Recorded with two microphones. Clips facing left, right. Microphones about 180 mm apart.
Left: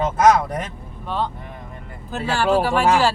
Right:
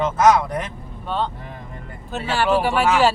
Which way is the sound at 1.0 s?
5° left (ahead or behind).